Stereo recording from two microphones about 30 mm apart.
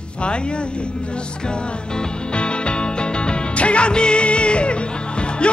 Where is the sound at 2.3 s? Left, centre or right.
Left.